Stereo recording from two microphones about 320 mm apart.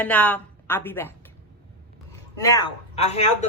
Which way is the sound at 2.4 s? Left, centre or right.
Centre.